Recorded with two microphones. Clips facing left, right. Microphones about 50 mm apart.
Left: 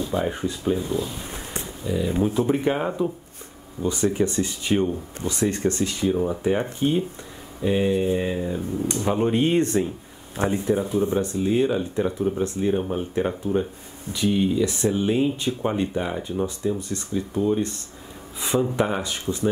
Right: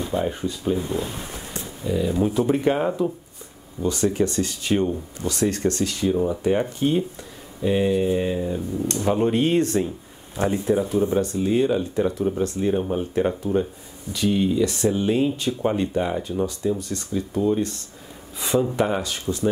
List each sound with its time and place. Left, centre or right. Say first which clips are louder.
0.1 s speech: even; centre
0.7 s speech: even; right
1.3 s a sound: left 1 dB; left
1.9 s speech: right 1 dB; centre
10.6 s speech: right 3 dB; centre